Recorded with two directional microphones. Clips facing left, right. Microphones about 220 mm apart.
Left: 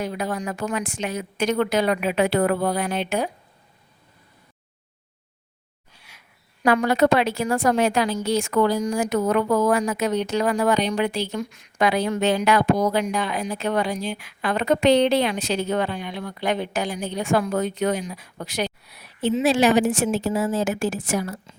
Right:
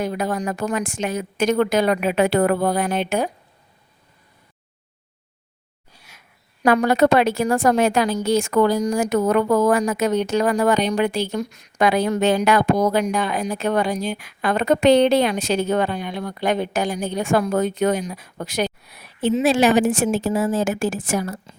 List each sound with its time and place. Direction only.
0.0 s a woman's voice: 45° right (ahead or behind)
5.9 s a woman's voice: 45° right (ahead or behind)